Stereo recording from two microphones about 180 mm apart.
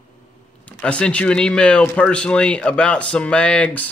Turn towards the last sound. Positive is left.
turn(degrees=5)  # may be behind; listen again after turning